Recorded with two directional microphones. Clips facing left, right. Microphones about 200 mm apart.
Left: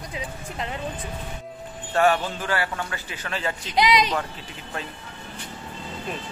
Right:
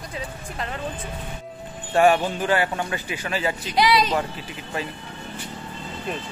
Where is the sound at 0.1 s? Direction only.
15° left (ahead or behind).